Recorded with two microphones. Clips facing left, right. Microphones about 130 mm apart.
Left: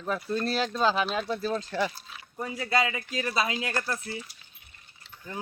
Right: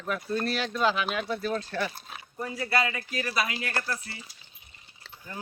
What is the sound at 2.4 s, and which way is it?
Speech, 20° left (ahead or behind).